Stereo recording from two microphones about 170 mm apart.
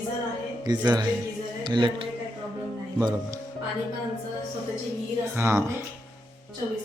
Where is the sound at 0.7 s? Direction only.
25° right (ahead or behind).